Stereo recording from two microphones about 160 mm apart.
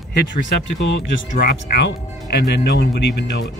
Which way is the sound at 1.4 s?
80° left.